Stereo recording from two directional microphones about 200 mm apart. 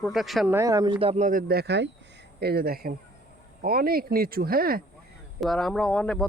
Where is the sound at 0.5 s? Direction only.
15° right (ahead or behind); by 4.8 s 50° right (ahead or behind).